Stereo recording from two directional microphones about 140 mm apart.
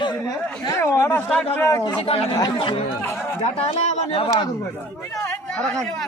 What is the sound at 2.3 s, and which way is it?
Speech, 30° left (ahead or behind).